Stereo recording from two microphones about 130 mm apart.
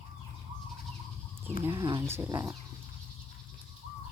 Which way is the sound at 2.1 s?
20° right (ahead or behind).